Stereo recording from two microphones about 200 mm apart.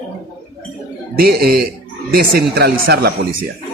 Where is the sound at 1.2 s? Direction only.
50° right (ahead or behind).